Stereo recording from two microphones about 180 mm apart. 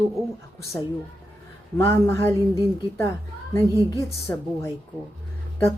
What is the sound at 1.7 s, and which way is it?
Speech, 15° left (ahead or behind).